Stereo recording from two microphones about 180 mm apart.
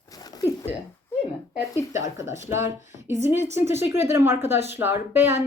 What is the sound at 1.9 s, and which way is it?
A woman's voice, 15° right (ahead or behind).